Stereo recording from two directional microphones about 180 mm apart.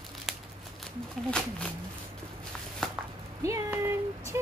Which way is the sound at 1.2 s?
5° left (ahead or behind).